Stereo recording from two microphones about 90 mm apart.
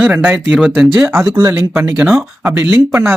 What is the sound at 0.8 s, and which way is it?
Speech, 5° right (ahead or behind).